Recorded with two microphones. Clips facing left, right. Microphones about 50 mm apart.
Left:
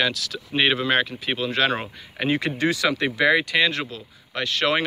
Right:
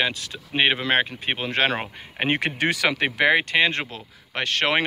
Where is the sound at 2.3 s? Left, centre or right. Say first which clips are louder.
Left 1 dB; right.